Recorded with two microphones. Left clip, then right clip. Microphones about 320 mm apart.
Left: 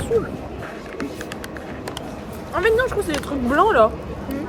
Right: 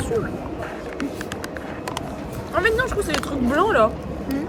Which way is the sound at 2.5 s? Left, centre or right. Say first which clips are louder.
Left 2 dB; centre.